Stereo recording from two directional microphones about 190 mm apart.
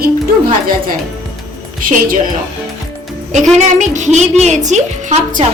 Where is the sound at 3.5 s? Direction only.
40° right (ahead or behind).